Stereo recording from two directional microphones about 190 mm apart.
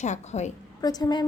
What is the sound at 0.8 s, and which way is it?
Speech, 20° left (ahead or behind).